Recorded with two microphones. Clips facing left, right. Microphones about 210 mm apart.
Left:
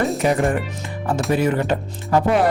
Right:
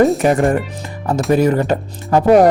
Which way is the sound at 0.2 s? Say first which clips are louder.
Right 5 dB; 50° right (ahead or behind).